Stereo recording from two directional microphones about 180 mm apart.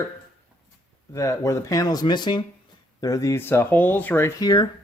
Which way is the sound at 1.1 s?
15° left (ahead or behind).